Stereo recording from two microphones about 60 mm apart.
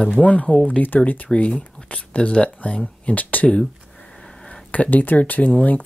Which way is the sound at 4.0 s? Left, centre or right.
Centre.